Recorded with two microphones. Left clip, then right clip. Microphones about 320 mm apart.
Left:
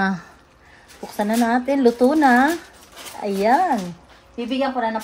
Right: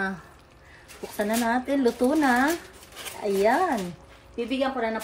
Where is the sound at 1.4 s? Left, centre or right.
Left.